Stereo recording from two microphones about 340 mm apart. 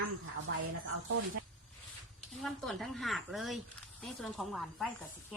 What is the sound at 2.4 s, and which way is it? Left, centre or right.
Speech, centre.